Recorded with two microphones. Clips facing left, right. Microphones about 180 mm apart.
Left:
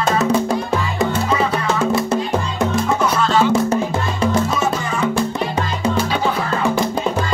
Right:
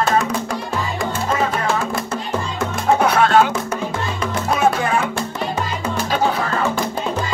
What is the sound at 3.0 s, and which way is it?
Music, 60° right (ahead or behind).